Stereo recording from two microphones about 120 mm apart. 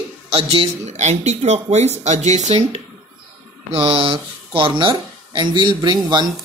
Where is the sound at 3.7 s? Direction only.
50° right (ahead or behind).